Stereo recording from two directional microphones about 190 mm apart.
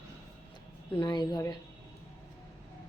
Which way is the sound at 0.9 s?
25° left (ahead or behind).